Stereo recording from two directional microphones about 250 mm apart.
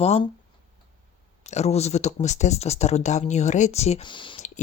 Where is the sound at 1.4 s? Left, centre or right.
Left.